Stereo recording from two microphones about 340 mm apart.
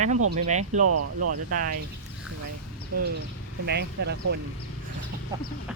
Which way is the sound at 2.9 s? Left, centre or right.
Right.